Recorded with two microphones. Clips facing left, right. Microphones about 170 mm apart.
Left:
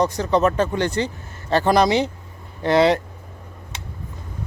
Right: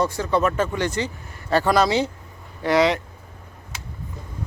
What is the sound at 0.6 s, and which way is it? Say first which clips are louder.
Speech: left 2 dB; 35° left (ahead or behind).